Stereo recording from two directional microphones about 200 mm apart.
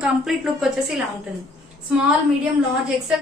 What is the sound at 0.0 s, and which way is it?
A woman's voice, 5° right (ahead or behind).